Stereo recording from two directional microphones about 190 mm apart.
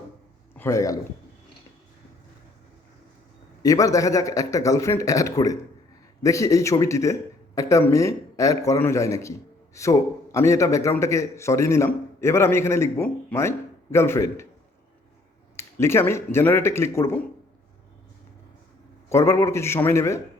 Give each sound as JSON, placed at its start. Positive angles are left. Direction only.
{"t": 0.5, "sound": "a man's voice", "side_deg": 15}
{"t": 3.6, "sound": "a man's voice", "side_deg": 15}
{"t": 15.5, "sound": "a man's voice", "side_deg": 15}
{"t": 19.0, "sound": "a man's voice", "side_deg": 15}